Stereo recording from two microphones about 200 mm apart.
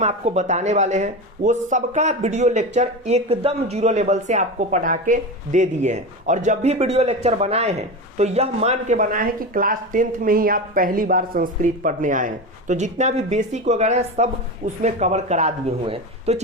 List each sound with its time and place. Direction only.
0.0 s speech: 35° right (ahead or behind)